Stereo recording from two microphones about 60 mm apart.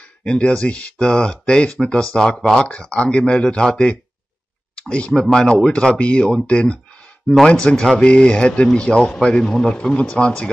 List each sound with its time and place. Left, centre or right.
0.2 s speech: centre